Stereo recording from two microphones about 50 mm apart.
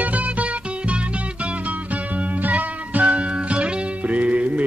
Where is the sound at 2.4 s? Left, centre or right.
Right.